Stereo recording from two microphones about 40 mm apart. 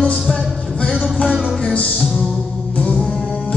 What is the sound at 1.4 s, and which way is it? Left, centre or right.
Music, left.